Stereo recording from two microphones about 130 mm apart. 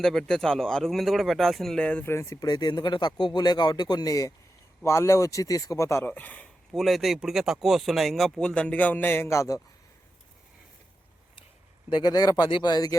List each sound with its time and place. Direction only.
0.0 s speech: 5° left (ahead or behind)
2.0 s speech: 20° left (ahead or behind)
6.7 s speech: centre (ahead or behind); by 9.6 s 20° left (ahead or behind)
11.9 s speech: 35° left (ahead or behind)